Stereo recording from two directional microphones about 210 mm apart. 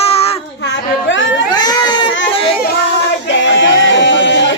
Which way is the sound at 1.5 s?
20° left (ahead or behind).